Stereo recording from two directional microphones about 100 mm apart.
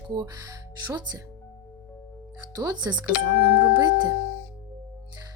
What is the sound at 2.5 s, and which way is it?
Speech, 40° right (ahead or behind).